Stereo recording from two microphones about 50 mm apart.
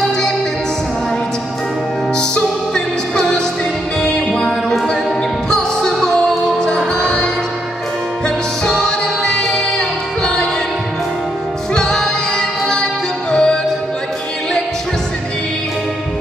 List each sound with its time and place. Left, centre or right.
2.1 s music: centre
8.8 s music: centre
11.7 s choir: centre
13.3 s music: centre